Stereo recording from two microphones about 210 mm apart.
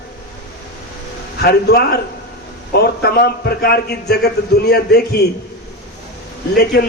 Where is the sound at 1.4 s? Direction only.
50° left (ahead or behind).